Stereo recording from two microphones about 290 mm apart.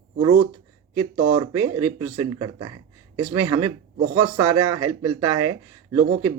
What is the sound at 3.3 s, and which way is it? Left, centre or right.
A man's voice, right.